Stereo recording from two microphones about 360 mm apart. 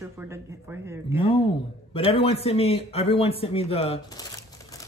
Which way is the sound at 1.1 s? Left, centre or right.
Centre.